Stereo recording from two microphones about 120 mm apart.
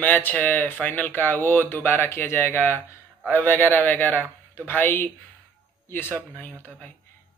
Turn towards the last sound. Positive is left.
turn(degrees=15)  # may be behind; listen again after turning